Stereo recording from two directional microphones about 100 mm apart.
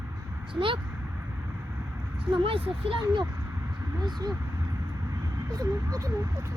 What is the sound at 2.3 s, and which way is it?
Speech, 65° right (ahead or behind).